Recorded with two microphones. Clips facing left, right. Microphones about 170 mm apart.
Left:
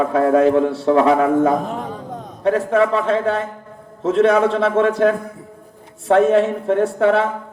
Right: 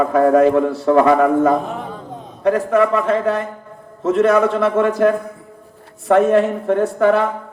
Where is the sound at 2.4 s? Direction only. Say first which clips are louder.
Right 1 dB; 30° left (ahead or behind).